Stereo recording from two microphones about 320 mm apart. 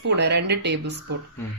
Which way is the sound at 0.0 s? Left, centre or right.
Right.